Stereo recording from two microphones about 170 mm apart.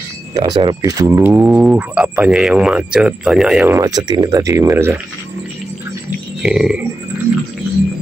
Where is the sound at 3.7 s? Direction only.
20° right (ahead or behind).